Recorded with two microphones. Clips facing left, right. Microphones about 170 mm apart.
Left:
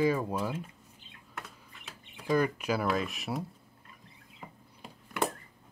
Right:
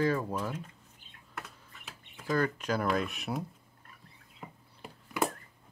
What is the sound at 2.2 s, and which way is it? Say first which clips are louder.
Speech: left 2 dB; 15° left (ahead or behind).